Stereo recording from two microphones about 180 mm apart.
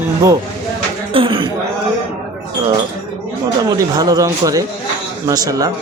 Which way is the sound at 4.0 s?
20° right (ahead or behind).